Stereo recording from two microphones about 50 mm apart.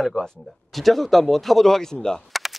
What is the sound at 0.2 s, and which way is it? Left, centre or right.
Speech, centre.